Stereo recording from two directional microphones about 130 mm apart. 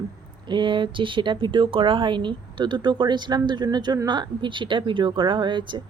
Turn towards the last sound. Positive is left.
turn(degrees=-40)  # may be behind; listen again after turning